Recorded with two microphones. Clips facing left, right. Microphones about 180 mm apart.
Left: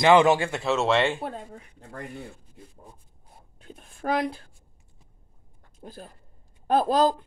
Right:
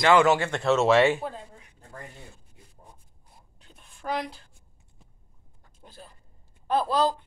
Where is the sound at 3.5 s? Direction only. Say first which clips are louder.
Left 14 dB; 50° left (ahead or behind).